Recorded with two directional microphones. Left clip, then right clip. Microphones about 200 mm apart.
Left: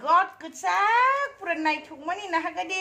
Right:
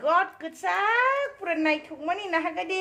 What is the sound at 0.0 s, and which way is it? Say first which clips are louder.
A woman's voice: left 2 dB; 20° right (ahead or behind).